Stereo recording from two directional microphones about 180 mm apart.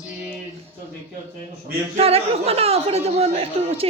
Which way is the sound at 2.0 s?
35° right (ahead or behind).